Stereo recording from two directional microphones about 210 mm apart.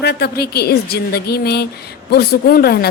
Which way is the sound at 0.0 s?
50° left (ahead or behind).